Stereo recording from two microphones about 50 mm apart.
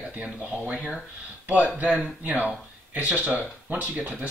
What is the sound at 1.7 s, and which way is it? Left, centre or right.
Speech, right.